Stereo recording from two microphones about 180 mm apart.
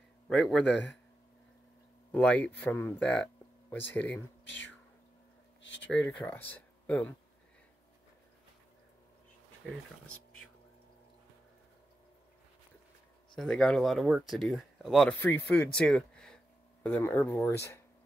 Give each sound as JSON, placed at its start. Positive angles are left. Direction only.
{"t": 0.3, "sound": "speech", "side_deg": 0}
{"t": 2.1, "sound": "speech", "side_deg": 5}
{"t": 4.5, "sound": "speech", "side_deg": 90}
{"t": 5.6, "sound": "a sound", "side_deg": 90}
{"t": 6.1, "sound": "speech", "side_deg": 10}
{"t": 9.7, "sound": "speech", "side_deg": 5}
{"t": 13.4, "sound": "speech", "side_deg": 5}